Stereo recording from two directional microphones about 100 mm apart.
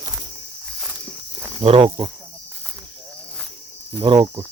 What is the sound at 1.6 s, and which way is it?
Speech, 65° right (ahead or behind).